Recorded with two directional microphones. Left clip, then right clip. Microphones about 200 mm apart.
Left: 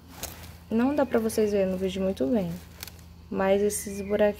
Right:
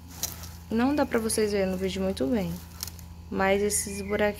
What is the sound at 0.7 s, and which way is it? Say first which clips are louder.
Speech: left 1 dB; 10° left (ahead or behind).